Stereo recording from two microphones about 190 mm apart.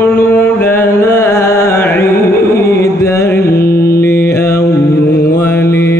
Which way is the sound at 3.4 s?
50° left (ahead or behind).